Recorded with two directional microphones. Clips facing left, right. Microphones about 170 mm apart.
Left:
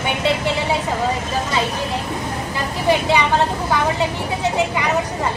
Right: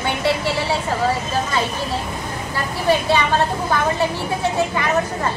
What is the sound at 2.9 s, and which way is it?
Speech, 15° left (ahead or behind).